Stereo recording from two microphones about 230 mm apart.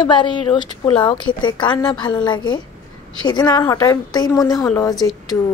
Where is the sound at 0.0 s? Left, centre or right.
Centre.